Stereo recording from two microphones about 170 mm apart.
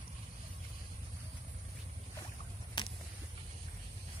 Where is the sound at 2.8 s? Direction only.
30° left (ahead or behind).